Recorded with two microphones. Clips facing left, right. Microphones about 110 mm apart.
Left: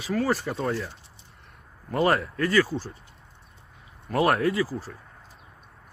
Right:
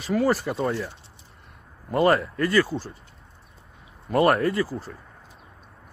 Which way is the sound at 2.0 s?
Centre (ahead or behind).